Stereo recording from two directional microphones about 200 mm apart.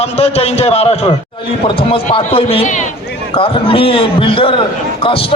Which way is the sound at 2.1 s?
30° left (ahead or behind).